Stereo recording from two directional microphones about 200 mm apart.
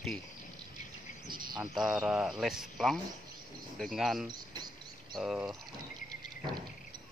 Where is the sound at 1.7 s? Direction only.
Centre (ahead or behind).